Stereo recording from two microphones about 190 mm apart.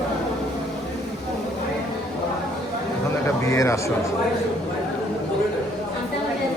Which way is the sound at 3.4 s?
15° left (ahead or behind).